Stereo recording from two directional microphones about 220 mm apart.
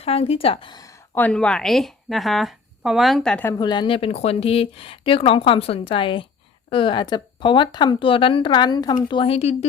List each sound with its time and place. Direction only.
0.0 s a woman's voice: 25° left (ahead or behind); by 3.5 s 5° left (ahead or behind)
3.6 s speech: 20° left (ahead or behind)